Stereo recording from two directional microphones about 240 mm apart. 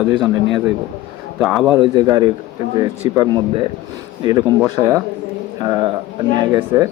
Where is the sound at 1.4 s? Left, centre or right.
Centre.